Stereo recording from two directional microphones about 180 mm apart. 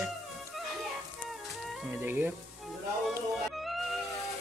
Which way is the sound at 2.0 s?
10° right (ahead or behind).